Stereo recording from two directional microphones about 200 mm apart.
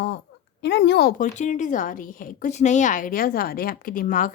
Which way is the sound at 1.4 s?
40° left (ahead or behind).